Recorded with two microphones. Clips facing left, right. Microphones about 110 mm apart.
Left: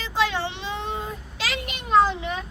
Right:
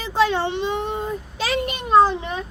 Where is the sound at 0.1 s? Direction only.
30° right (ahead or behind).